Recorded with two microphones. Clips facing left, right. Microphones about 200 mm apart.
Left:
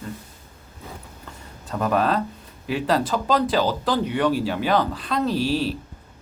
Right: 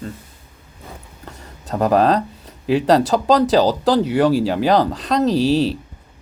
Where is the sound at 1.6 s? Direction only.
40° right (ahead or behind).